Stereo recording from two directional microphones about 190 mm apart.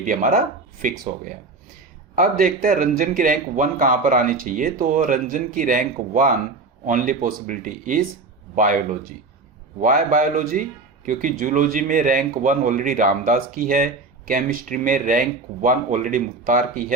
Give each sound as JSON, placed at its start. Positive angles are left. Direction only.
{"t": 0.0, "sound": "a man's voice", "side_deg": -45}